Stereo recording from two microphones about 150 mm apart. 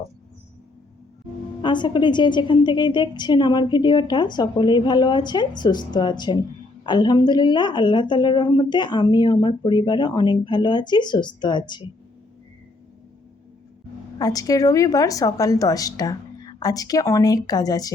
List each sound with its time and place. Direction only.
1.6 s speech: 30° left (ahead or behind)
14.2 s a woman's voice: 25° left (ahead or behind)